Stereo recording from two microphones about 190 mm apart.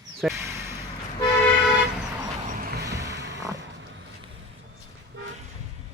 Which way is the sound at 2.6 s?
50° right (ahead or behind).